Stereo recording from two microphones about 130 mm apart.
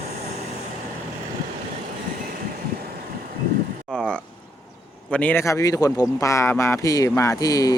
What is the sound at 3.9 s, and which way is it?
A man's voice, 10° left (ahead or behind).